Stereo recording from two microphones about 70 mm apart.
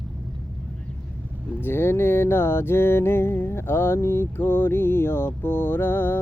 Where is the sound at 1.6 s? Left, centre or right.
Left.